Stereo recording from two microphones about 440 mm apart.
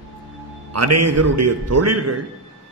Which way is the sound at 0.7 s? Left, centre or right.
Right.